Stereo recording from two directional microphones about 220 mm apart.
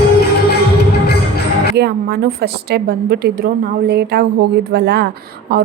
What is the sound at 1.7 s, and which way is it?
A woman's voice, 45° right (ahead or behind).